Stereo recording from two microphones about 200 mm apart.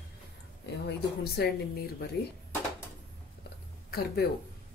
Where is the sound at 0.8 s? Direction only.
55° left (ahead or behind).